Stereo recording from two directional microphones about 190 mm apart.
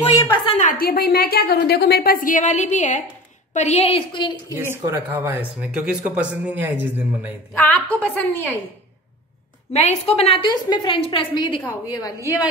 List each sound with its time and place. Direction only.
0.6 s a woman's voice: 45° left (ahead or behind); by 4.6 s 25° left (ahead or behind)
4.6 s speech: 15° right (ahead or behind)
7.5 s a woman's voice: 10° left (ahead or behind)
9.7 s a woman's voice: 35° left (ahead or behind); by 12.1 s 20° left (ahead or behind)